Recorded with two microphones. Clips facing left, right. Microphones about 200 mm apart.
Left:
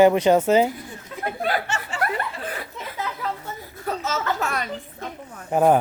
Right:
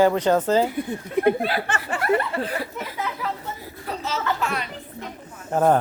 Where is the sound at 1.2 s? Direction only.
60° right (ahead or behind).